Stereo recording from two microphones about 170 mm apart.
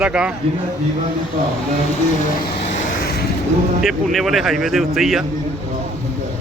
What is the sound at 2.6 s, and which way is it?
Vehicle, 40° left (ahead or behind).